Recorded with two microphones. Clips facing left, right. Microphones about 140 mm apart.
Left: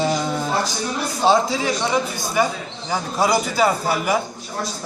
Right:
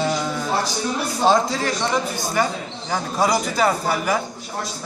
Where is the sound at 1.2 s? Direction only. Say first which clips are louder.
Left 1 dB; 5° left (ahead or behind).